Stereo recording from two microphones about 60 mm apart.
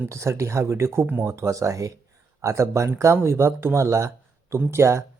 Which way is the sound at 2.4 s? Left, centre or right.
Right.